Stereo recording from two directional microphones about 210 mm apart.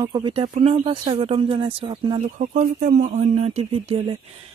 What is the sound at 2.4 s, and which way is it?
Speech, 35° right (ahead or behind).